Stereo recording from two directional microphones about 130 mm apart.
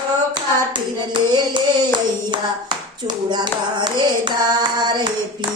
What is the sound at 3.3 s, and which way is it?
Hands, 35° right (ahead or behind).